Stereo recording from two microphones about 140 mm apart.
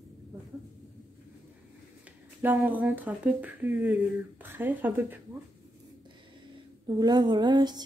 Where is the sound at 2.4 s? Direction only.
15° right (ahead or behind).